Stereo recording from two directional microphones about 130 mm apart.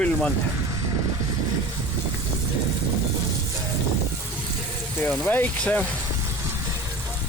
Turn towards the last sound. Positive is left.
turn(degrees=10)  # may be behind; listen again after turning